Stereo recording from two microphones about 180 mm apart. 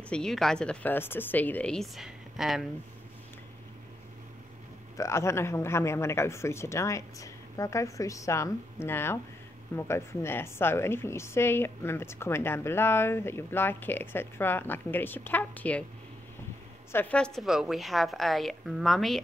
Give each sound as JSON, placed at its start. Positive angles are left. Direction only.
{"t": 0.1, "sound": "speech", "side_deg": 5}
{"t": 4.9, "sound": "a woman's voice", "side_deg": 15}
{"t": 16.9, "sound": "speech", "side_deg": 10}